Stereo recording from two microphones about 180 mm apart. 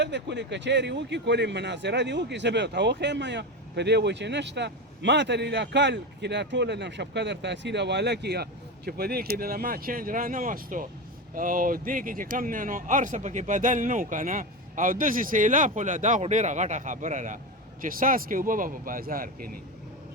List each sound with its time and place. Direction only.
0.0 s speech: 75° right (ahead or behind); by 19.5 s 55° right (ahead or behind)